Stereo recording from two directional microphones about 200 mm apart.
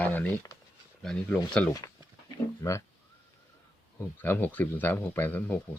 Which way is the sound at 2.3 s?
15° left (ahead or behind).